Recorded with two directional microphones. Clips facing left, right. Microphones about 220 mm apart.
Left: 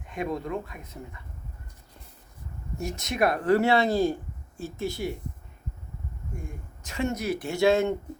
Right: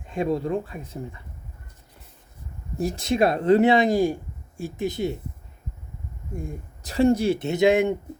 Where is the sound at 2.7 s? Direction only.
35° right (ahead or behind).